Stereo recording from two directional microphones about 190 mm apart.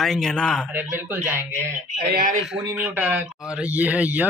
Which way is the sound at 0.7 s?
10° right (ahead or behind).